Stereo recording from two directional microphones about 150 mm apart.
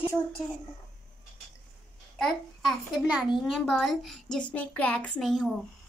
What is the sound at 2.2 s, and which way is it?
A child's voice, 5° right (ahead or behind).